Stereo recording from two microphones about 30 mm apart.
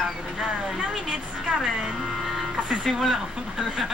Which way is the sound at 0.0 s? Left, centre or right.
Centre.